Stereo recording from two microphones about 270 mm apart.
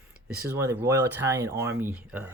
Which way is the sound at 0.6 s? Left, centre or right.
Centre.